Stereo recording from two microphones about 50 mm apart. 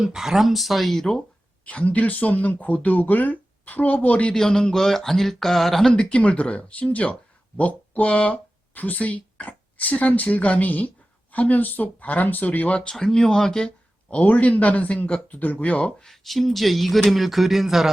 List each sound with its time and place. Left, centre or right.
0.0 s speech: centre
1.6 s speech: left
4.3 s speech: centre
5.9 s speech: centre
12.9 s speech: centre
14.1 s speech: left
16.0 s speech: centre